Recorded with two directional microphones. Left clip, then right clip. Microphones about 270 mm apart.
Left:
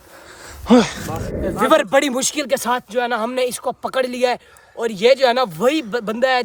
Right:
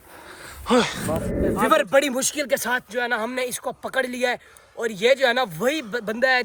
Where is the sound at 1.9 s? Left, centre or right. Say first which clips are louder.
Left 3 dB; left.